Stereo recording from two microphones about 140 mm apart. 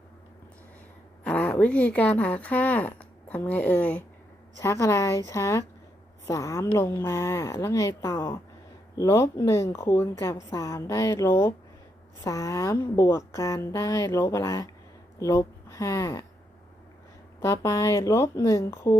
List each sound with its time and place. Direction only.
1.2 s a woman's voice: 10° left (ahead or behind); by 16.2 s 25° left (ahead or behind)
17.4 s a woman's voice: 20° left (ahead or behind)